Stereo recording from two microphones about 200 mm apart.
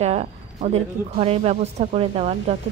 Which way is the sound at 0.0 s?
30° right (ahead or behind).